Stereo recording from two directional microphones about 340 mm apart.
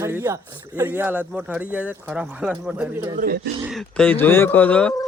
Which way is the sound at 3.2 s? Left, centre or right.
Right.